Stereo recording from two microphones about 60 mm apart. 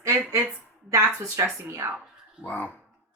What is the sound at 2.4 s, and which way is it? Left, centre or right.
Speech, left.